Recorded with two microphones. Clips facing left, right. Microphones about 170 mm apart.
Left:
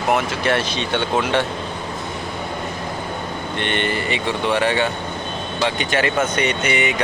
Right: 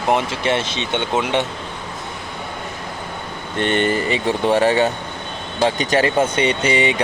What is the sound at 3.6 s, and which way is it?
Speech, 40° right (ahead or behind).